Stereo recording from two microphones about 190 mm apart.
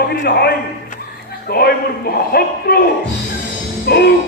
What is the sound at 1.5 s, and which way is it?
A man's voice, 55° left (ahead or behind).